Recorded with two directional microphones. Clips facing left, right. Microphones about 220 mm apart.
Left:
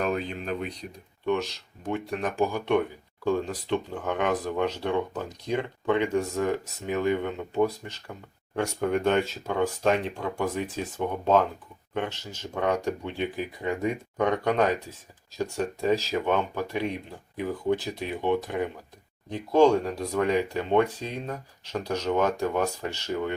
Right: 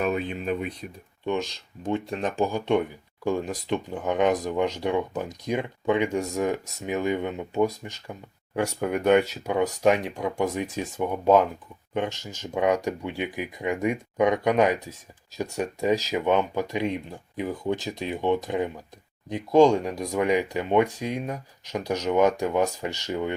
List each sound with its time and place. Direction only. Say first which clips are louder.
0.0 s speech: right 2 dB; 5° right (ahead or behind)
1.2 s speech: left 1 dB; 20° right (ahead or behind)
11.9 s speech: right 3 dB; 10° right (ahead or behind)